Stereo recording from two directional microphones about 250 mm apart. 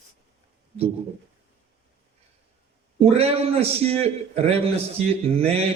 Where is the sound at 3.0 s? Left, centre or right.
Right.